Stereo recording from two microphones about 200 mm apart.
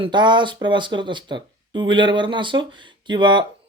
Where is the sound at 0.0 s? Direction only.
20° right (ahead or behind).